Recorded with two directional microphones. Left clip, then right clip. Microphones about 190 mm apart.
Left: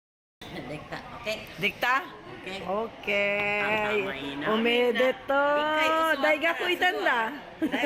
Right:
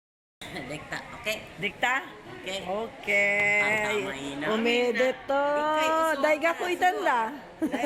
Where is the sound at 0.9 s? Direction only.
5° right (ahead or behind).